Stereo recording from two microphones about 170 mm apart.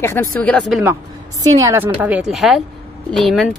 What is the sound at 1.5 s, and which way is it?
Speech, 15° right (ahead or behind).